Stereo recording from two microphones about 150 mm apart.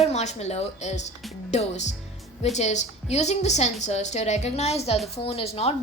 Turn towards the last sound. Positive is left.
turn(degrees=45)  # may be behind; listen again after turning